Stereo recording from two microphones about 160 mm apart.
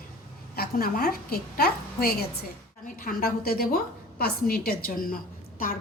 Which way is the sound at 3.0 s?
65° left (ahead or behind).